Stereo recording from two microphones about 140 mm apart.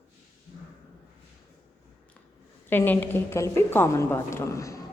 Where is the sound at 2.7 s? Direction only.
15° left (ahead or behind).